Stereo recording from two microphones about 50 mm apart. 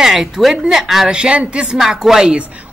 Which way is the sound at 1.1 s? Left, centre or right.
Right.